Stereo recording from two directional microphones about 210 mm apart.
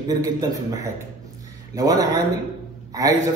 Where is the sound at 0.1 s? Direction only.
15° right (ahead or behind).